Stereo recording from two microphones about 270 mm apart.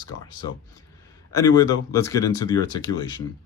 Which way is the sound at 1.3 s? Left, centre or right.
Centre.